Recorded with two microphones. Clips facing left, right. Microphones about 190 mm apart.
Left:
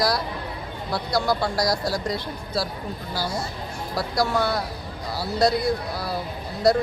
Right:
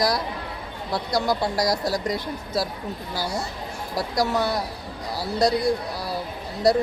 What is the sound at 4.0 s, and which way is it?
Speech, 15° right (ahead or behind).